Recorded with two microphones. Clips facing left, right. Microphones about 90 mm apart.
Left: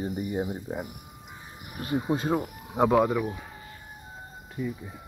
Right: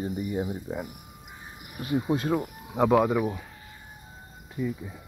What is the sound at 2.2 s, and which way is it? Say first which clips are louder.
Speech: even; 20° left (ahead or behind).